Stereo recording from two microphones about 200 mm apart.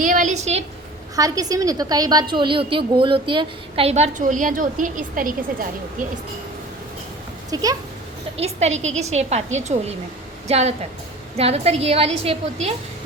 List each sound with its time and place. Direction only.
0.0 s a woman's voice: 40° right (ahead or behind)
1.1 s a woman's voice: 15° right (ahead or behind); by 5.3 s 40° right (ahead or behind)
7.5 s a woman's voice: 20° right (ahead or behind)
8.4 s a woman's voice: 30° right (ahead or behind)